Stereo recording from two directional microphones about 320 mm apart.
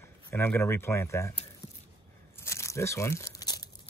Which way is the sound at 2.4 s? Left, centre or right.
Centre.